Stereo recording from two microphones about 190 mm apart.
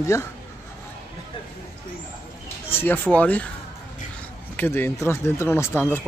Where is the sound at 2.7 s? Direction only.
10° left (ahead or behind).